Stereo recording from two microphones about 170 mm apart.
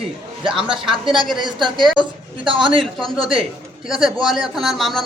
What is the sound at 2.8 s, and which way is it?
A man's voice, centre (ahead or behind).